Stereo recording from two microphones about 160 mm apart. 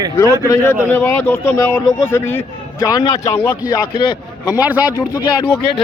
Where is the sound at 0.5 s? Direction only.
15° left (ahead or behind).